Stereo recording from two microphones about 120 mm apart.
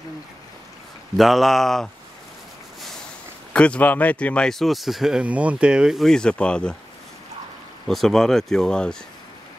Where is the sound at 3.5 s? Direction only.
10° left (ahead or behind).